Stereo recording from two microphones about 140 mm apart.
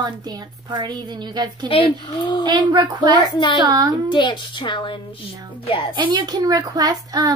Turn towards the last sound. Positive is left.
turn(degrees=-25)  # may be behind; listen again after turning